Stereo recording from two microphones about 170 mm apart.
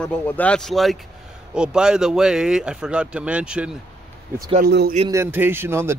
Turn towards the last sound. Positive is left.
turn(degrees=-15)  # may be behind; listen again after turning